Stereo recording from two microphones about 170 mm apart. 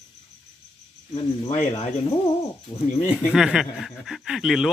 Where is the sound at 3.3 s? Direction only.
5° right (ahead or behind).